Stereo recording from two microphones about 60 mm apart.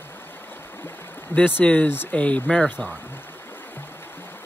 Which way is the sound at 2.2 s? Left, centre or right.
Left.